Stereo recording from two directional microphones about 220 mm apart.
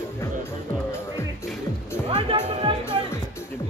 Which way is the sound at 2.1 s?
25° right (ahead or behind).